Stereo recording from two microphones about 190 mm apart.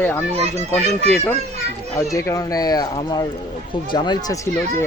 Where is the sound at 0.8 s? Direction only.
35° right (ahead or behind).